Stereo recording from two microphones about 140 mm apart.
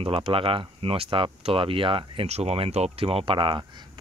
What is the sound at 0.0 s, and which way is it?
Speech, 40° right (ahead or behind).